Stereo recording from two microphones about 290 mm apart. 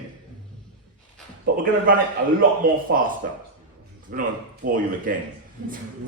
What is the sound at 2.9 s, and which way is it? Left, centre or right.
A man's voice, right.